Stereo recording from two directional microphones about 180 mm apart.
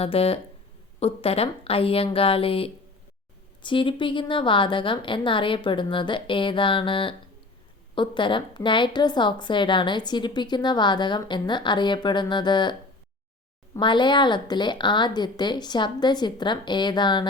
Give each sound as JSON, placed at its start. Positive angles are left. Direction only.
{"t": 0.0, "sound": "a woman's voice", "side_deg": 35}
{"t": 13.7, "sound": "a woman's voice", "side_deg": 25}